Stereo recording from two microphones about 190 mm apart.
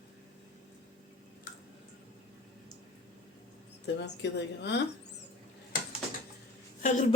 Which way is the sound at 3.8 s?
65° left (ahead or behind).